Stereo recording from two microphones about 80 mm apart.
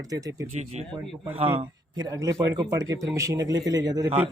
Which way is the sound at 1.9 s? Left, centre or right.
Right.